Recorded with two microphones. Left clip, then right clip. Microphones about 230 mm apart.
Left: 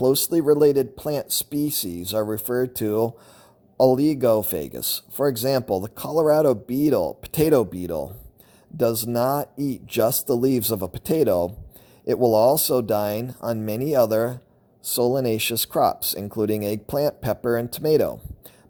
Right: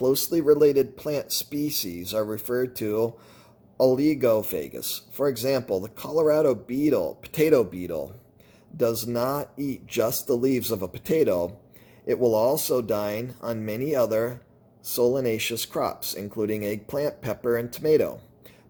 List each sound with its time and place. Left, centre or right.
0.0 s speech: left